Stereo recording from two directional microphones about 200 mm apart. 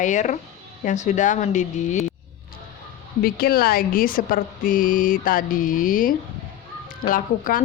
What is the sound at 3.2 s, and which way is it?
A woman's voice, 50° left (ahead or behind).